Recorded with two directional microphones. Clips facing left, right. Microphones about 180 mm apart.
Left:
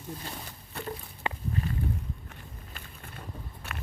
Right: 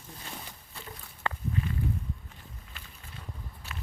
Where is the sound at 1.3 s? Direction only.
15° left (ahead or behind).